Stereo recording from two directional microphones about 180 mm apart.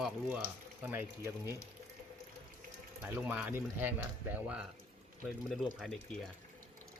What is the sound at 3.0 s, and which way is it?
Speech, 5° right (ahead or behind).